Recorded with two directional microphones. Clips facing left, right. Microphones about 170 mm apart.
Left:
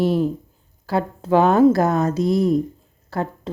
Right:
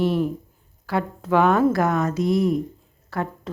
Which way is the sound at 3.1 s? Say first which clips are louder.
Left 2 dB; 30° left (ahead or behind).